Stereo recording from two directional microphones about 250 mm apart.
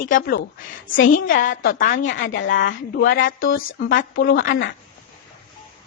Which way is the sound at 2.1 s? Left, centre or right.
Left.